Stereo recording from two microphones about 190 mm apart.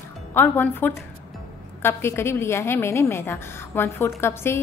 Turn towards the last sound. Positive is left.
turn(degrees=15)  # may be behind; listen again after turning